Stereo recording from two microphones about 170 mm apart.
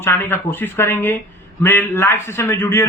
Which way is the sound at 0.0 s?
15° left (ahead or behind).